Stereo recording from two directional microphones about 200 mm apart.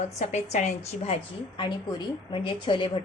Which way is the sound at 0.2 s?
35° left (ahead or behind).